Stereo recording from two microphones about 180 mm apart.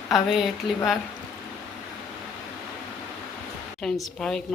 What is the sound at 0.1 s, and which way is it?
Speech, centre (ahead or behind).